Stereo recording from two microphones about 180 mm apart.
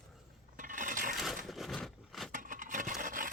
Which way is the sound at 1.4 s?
Centre (ahead or behind).